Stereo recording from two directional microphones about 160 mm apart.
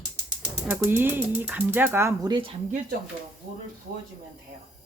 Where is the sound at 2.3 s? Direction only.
35° right (ahead or behind).